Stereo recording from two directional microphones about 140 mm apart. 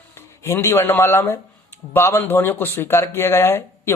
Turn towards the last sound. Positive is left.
turn(degrees=20)  # may be behind; listen again after turning